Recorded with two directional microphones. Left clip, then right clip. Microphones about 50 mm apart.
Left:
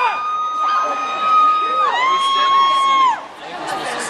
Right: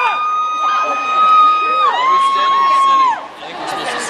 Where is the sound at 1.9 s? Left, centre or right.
Left.